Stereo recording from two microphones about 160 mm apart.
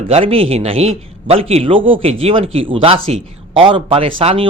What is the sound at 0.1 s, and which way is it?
A man's voice, 35° right (ahead or behind).